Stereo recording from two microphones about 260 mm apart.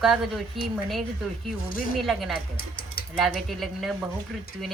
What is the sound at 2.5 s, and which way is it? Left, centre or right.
Speech, left.